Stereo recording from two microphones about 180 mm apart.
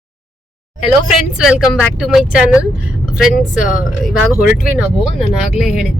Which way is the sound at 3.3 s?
50° left (ahead or behind).